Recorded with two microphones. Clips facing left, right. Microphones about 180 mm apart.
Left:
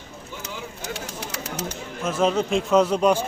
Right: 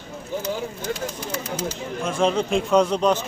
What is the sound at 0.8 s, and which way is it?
Speech, 75° left (ahead or behind).